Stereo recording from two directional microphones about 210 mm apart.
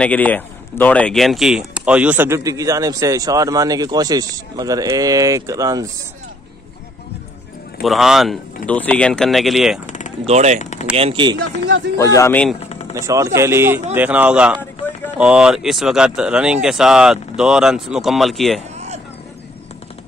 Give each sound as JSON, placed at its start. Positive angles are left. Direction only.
{"t": 0.0, "sound": "speech", "side_deg": 5}
{"t": 7.8, "sound": "speech", "side_deg": 0}
{"t": 9.8, "sound": "a sound", "side_deg": 35}
{"t": 10.2, "sound": "speech", "side_deg": -35}
{"t": 10.6, "sound": "speech", "side_deg": 35}
{"t": 11.0, "sound": "speech", "side_deg": -25}
{"t": 11.3, "sound": "speech", "side_deg": -60}
{"t": 12.0, "sound": "a man's voice", "side_deg": 15}
{"t": 12.5, "sound": "vehicle", "side_deg": 30}
{"t": 12.9, "sound": "speech", "side_deg": -15}